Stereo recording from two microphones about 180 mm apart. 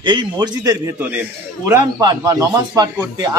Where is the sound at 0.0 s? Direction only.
25° right (ahead or behind).